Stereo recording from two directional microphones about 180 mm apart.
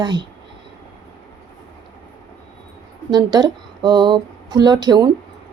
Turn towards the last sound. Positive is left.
turn(degrees=-20)  # may be behind; listen again after turning